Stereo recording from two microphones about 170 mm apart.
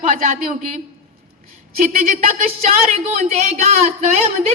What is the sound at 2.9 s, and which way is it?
Speech, 40° right (ahead or behind).